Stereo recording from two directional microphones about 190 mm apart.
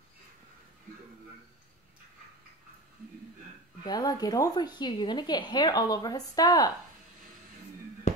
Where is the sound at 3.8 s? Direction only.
20° left (ahead or behind).